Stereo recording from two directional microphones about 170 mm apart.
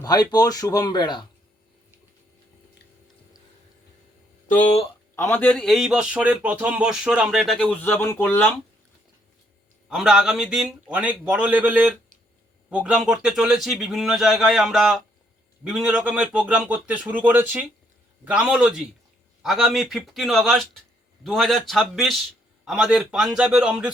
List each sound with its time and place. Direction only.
0.0 s speech: 25° left (ahead or behind)
4.4 s speech: 50° left (ahead or behind)
5.1 s a man's voice: 15° left (ahead or behind)
9.9 s a man's voice: centre (ahead or behind)